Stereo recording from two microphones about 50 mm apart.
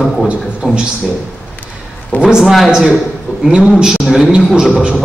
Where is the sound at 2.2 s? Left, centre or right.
Centre.